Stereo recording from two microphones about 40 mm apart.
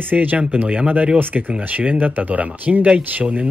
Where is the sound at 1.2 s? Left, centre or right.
Right.